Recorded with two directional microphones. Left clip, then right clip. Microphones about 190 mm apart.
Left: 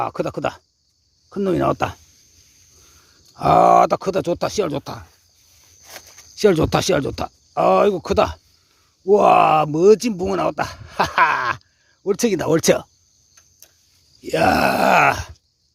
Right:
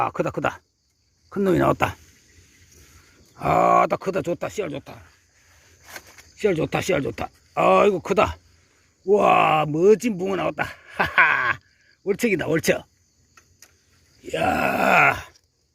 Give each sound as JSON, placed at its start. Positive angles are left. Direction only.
{"t": 0.0, "sound": "speech", "side_deg": 10}
{"t": 3.3, "sound": "speech", "side_deg": 20}
{"t": 4.8, "sound": "speech", "side_deg": 45}
{"t": 6.3, "sound": "speech", "side_deg": 35}
{"t": 14.3, "sound": "speech", "side_deg": 35}